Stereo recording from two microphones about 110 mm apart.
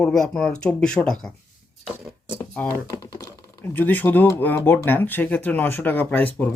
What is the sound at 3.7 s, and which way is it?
Speech, 15° left (ahead or behind).